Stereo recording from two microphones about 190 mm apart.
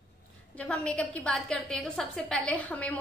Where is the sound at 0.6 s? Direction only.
5° left (ahead or behind).